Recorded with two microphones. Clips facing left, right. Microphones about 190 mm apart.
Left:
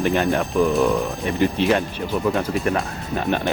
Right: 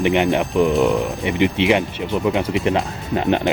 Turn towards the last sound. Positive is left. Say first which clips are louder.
# right 4 dB
turn(degrees=-20)  # may be behind; listen again after turning